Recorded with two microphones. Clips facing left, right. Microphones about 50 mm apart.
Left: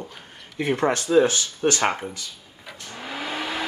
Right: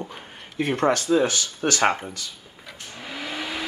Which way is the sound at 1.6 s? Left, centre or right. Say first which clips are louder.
Left 3 dB; centre.